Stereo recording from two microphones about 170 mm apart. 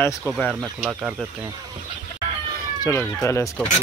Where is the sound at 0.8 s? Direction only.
5° right (ahead or behind).